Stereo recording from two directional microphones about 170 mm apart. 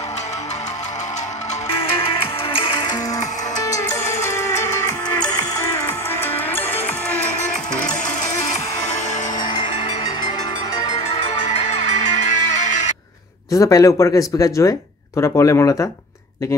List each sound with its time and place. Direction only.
2.5 s music: 30° left (ahead or behind); by 7.3 s 10° left (ahead or behind)
9.4 s music: 25° left (ahead or behind)
11.8 s music: 45° left (ahead or behind)
13.6 s speech: 20° left (ahead or behind)